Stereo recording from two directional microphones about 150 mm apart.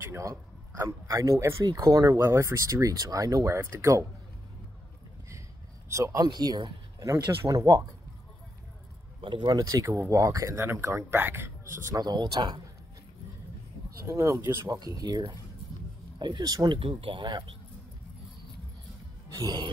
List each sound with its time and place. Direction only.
0.0 s speech: 20° right (ahead or behind)
5.9 s speech: 20° right (ahead or behind)
9.2 s speech: 30° right (ahead or behind)
14.0 s speech: 20° right (ahead or behind)
19.2 s music: 25° right (ahead or behind)